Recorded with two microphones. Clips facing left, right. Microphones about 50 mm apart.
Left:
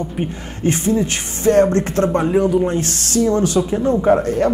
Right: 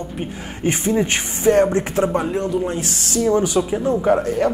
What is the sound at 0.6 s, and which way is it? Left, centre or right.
Speech, right.